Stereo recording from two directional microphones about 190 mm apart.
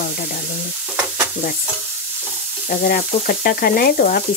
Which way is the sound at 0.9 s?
10° right (ahead or behind).